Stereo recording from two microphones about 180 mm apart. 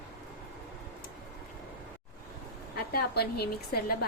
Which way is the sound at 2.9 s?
60° left (ahead or behind).